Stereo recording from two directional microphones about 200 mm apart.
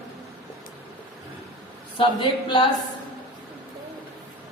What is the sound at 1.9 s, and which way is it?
Speech, 25° left (ahead or behind).